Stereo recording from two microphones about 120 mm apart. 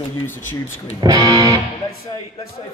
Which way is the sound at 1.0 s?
35° right (ahead or behind).